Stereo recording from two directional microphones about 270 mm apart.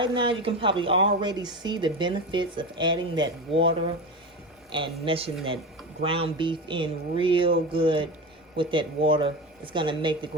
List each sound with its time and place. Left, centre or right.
0.0 s speech: centre
4.7 s speech: centre